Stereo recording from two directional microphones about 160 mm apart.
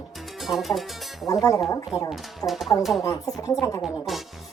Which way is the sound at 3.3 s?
20° left (ahead or behind).